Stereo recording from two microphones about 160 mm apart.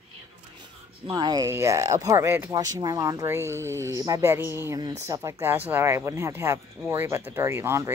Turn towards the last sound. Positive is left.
turn(degrees=-15)  # may be behind; listen again after turning